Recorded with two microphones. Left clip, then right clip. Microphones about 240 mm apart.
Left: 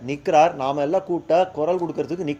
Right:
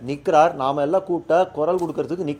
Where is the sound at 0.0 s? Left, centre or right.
Right.